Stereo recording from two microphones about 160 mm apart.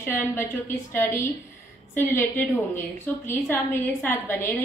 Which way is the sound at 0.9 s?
15° left (ahead or behind).